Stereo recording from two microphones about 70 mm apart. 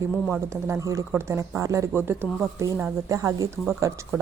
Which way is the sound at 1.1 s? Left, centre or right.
Right.